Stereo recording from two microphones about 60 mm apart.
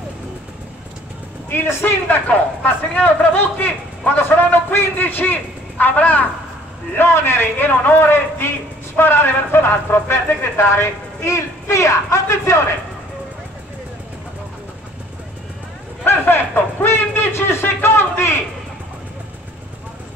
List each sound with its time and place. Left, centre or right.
1.5 s a man's voice: left
2.2 s a man's voice: left
7.0 s a man's voice: left
16.1 s a sound: left